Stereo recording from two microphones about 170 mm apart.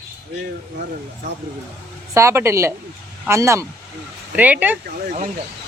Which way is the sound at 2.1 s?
15° right (ahead or behind).